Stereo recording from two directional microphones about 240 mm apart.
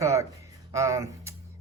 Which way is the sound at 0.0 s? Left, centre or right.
Centre.